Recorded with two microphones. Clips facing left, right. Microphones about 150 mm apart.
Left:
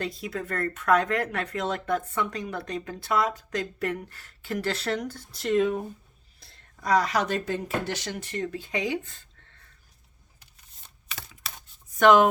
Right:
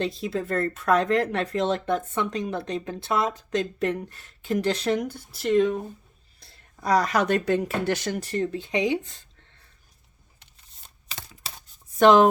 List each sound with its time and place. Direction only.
0.0 s speech: 25° right (ahead or behind); by 5.8 s 5° left (ahead or behind)
6.4 s a sound: centre (ahead or behind)
6.8 s speech: 40° right (ahead or behind)
8.2 s speech: 35° right (ahead or behind)
8.5 s speech: 20° right (ahead or behind)
10.4 s a sound: 30° right (ahead or behind)
11.9 s speech: 35° right (ahead or behind)